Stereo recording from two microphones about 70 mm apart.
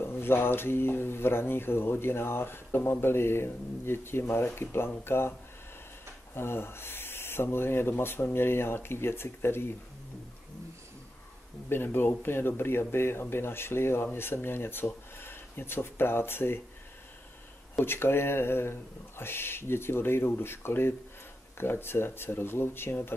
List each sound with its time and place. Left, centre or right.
0.0 s speech: left
6.3 s speech: left
11.7 s speech: left
17.7 s speech: left